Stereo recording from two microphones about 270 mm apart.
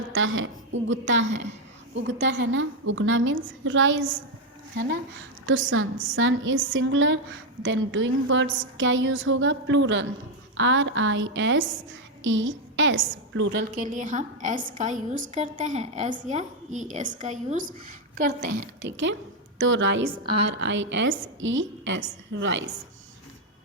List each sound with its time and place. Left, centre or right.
0.1 s a woman's voice: right
5.5 s a woman's voice: right
20.1 s a woman's voice: centre
20.4 s a woman's voice: right